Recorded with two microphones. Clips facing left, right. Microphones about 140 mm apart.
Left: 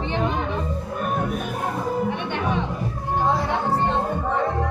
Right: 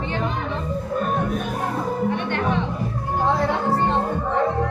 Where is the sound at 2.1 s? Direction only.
15° left (ahead or behind).